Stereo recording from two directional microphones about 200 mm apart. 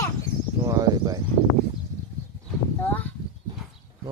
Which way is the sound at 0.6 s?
15° right (ahead or behind).